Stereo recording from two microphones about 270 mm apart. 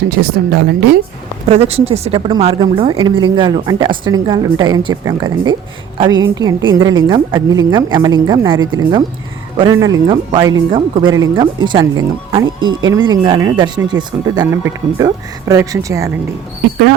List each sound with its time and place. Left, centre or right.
0.1 s a woman's voice: right
1.5 s a woman's voice: right
6.6 s speech: right
7.1 s a woman's voice: centre
8.5 s speech: right
8.8 s a woman's voice: centre